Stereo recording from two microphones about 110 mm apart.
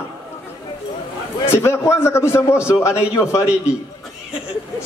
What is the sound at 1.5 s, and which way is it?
A man's voice, 25° left (ahead or behind).